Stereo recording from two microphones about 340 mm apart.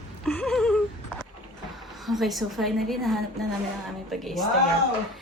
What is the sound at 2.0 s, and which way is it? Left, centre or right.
A woman's voice, centre.